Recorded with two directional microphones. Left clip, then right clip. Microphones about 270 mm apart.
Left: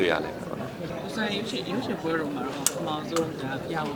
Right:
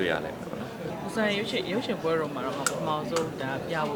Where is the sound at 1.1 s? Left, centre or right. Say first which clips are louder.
Right 3 dB; right.